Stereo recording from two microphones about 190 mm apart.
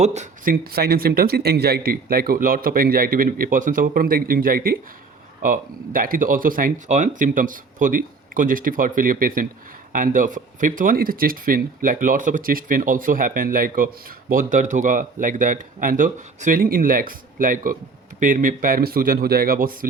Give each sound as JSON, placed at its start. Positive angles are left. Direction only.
{"t": 0.0, "sound": "speech", "side_deg": -35}
{"t": 0.5, "sound": "speech", "side_deg": -55}